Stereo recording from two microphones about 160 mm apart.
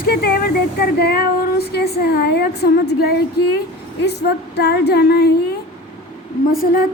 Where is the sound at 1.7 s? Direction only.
80° left.